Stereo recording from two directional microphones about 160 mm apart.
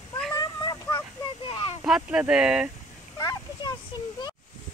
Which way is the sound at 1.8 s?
5° right (ahead or behind).